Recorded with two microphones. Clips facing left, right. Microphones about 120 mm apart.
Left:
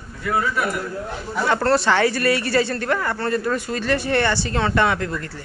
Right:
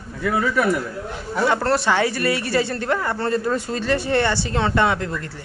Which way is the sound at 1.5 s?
10° right (ahead or behind).